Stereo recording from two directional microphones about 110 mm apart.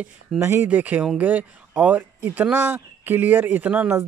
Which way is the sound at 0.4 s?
20° right (ahead or behind).